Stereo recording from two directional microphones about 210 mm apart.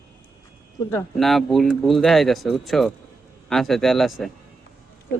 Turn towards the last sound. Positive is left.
turn(degrees=0)  # may be behind; listen again after turning